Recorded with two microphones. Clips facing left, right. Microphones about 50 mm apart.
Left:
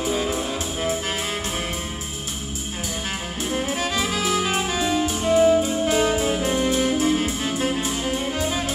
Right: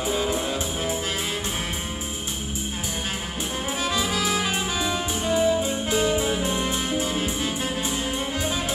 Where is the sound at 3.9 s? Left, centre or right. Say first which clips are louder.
Left 1 dB; left.